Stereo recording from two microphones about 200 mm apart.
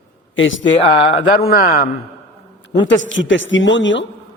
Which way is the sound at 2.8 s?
70° left (ahead or behind).